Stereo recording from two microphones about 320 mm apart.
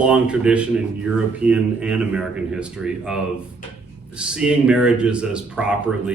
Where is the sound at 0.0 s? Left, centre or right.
Centre.